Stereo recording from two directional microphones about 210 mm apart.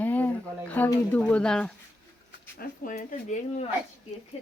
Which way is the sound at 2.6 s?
40° left (ahead or behind).